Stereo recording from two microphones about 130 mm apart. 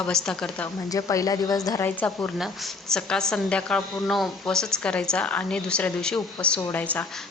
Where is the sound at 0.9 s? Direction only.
25° left (ahead or behind).